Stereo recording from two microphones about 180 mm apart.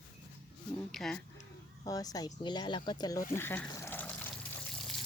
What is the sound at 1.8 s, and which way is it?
Speech, 20° left (ahead or behind).